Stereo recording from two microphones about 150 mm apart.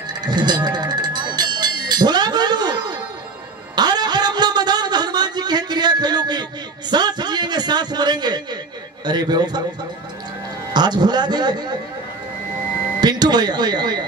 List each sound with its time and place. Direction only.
0.2 s music: 30° right (ahead or behind)
3.7 s a sound: 30° right (ahead or behind)
9.0 s speech: 30° right (ahead or behind)
10.7 s speech: 30° right (ahead or behind)
13.0 s speech: 30° right (ahead or behind)